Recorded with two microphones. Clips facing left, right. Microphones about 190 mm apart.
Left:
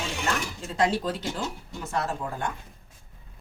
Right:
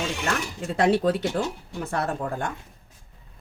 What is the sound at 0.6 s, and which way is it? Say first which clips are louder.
A woman's voice: right 6 dB; 60° right (ahead or behind).